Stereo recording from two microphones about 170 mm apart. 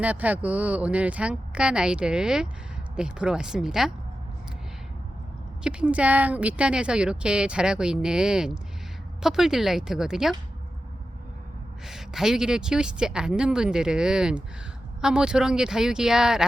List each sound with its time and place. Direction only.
0.0 s speech: 10° right (ahead or behind)
5.6 s speech: 10° right (ahead or behind)
11.9 s speech: centre (ahead or behind)